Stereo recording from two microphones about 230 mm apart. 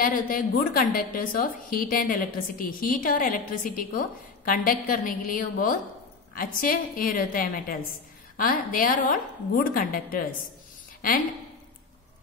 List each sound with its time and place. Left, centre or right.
0.0 s a woman's voice: left